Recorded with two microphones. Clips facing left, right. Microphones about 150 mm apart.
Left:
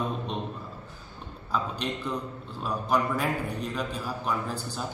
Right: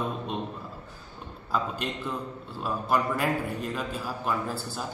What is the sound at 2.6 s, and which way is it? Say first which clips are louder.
A man's voice: even; 5° right (ahead or behind).